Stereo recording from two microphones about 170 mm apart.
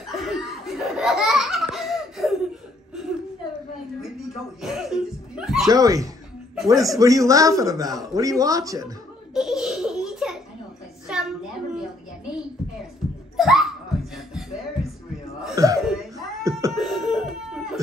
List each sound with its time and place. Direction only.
0.0 s laughter: centre (ahead or behind)
4.6 s laughter: centre (ahead or behind)
5.7 s a man's voice: 20° right (ahead or behind)
6.5 s music: centre (ahead or behind)
6.8 s a man's voice: 20° right (ahead or behind)
9.3 s belly laugh: centre (ahead or behind)
11.1 s a sound: 5° right (ahead or behind)
13.4 s laughter: centre (ahead or behind)
15.5 s cough: 20° right (ahead or behind)
15.9 s a sound: centre (ahead or behind)